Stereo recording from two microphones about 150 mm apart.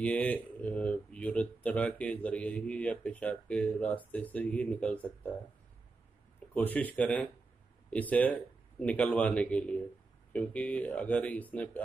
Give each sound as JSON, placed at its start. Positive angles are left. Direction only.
{"t": 0.0, "sound": "speech", "side_deg": 10}
{"t": 6.5, "sound": "speech", "side_deg": 10}